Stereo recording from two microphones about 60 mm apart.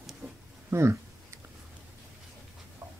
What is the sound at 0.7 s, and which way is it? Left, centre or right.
Speech, right.